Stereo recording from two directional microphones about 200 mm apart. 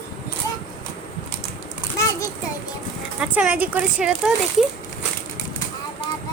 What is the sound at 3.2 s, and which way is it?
Speech, 5° right (ahead or behind).